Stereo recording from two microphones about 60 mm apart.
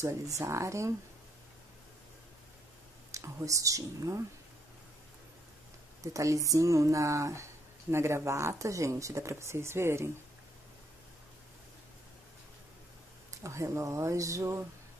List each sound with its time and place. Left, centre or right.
0.0 s speech: right
3.1 s speech: right
6.1 s speech: right
7.9 s speech: right
13.4 s speech: right